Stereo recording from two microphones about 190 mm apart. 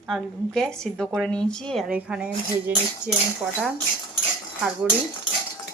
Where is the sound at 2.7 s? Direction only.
10° right (ahead or behind).